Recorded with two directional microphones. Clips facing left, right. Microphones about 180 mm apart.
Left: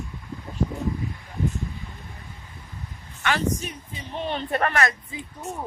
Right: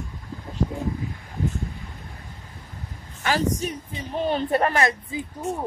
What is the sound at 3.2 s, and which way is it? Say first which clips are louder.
Speech: right 2 dB; 35° right (ahead or behind).